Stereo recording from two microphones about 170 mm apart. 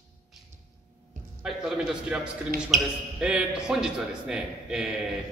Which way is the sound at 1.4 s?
5° right (ahead or behind).